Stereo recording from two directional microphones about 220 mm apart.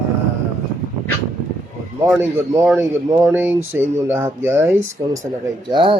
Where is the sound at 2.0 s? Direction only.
10° right (ahead or behind).